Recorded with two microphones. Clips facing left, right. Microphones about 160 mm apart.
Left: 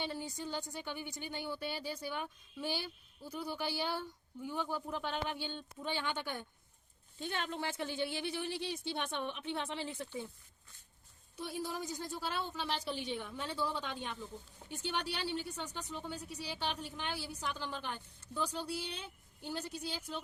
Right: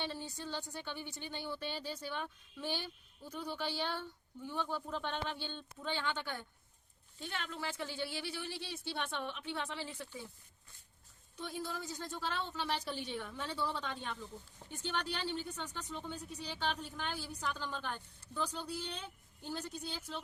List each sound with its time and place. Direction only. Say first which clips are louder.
0.0 s a woman's voice: left 2 dB; 15° left (ahead or behind)
7.2 s a woman's voice: left 4 dB; 30° left (ahead or behind)
11.3 s a woman's voice: left 2 dB; 10° left (ahead or behind)